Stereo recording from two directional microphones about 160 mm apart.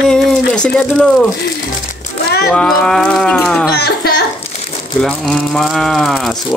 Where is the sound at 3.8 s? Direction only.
85° left.